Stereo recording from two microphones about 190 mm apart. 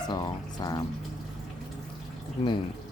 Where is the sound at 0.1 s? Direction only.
20° left (ahead or behind).